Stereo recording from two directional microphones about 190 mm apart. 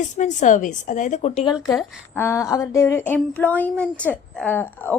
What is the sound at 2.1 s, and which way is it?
Speech, 15° left (ahead or behind).